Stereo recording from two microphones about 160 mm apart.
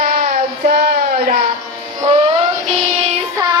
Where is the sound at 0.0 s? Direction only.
50° right (ahead or behind).